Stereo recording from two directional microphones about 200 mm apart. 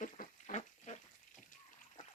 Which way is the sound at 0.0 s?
40° left (ahead or behind).